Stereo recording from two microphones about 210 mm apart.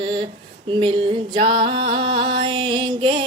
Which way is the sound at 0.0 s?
20° right (ahead or behind).